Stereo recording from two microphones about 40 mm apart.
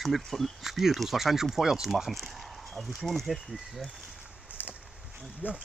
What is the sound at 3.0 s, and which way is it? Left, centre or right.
Speech, centre.